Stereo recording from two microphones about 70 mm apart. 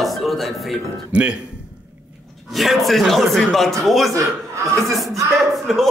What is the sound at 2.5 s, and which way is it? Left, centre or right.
Speech, centre.